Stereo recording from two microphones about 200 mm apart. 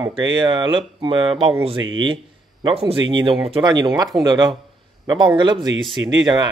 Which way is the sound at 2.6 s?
25° right (ahead or behind).